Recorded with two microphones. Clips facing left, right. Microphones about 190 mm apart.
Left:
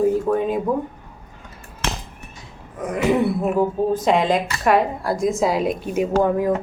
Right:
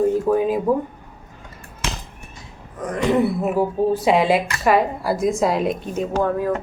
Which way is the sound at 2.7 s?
5° left (ahead or behind).